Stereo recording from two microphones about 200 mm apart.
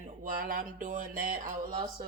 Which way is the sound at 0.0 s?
40° right (ahead or behind).